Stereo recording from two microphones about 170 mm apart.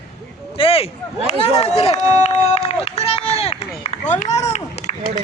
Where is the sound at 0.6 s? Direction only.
35° left (ahead or behind).